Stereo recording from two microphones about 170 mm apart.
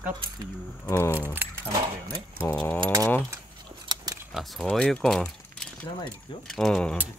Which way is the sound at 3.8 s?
25° right (ahead or behind).